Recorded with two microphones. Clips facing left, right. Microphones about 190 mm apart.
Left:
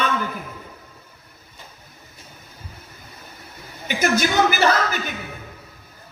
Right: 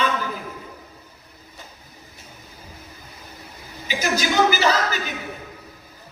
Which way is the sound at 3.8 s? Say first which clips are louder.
Left 3 dB; 55° left (ahead or behind).